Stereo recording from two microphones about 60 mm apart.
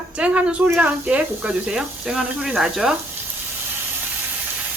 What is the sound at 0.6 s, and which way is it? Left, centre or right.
Speech, right.